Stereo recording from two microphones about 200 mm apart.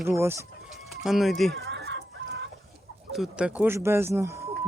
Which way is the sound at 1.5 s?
60° right (ahead or behind).